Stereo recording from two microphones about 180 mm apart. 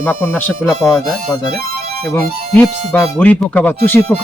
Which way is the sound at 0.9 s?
Centre (ahead or behind).